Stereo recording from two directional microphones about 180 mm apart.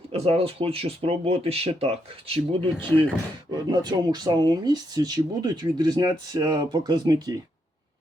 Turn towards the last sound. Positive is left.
turn(degrees=-20)  # may be behind; listen again after turning